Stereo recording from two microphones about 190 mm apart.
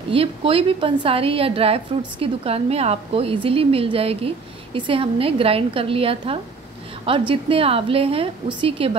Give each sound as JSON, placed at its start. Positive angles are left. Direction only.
{"t": 0.1, "sound": "a woman's voice", "side_deg": -30}